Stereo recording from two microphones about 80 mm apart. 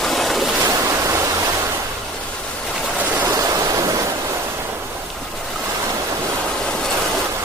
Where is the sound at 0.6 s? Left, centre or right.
Right.